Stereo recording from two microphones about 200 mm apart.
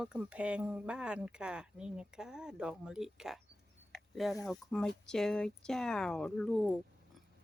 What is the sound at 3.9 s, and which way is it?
Mechanisms, centre (ahead or behind).